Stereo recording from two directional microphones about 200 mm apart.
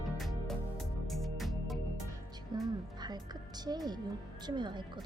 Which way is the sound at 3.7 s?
20° right (ahead or behind).